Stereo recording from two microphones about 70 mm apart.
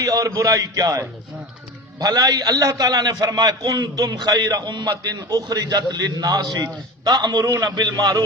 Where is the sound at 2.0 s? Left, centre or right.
Right.